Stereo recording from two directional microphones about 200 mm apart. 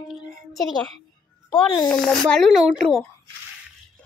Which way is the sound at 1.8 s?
5° left (ahead or behind).